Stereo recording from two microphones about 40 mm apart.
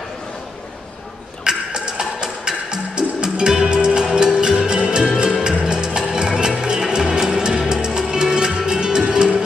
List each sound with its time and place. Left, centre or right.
1.4 s music: right